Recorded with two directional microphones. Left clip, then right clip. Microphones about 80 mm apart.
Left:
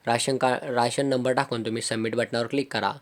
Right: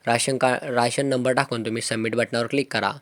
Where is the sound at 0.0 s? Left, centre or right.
Right.